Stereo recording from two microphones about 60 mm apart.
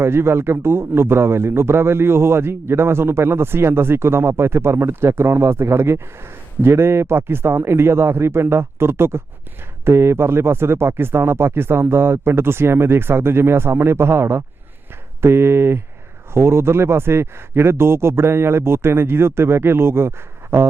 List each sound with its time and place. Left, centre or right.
0.0 s a man's voice: right